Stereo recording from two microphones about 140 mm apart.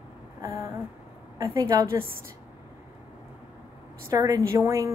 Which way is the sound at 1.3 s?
25° right (ahead or behind).